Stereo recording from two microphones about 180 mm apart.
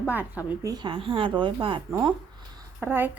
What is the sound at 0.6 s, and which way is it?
Speech, 25° right (ahead or behind).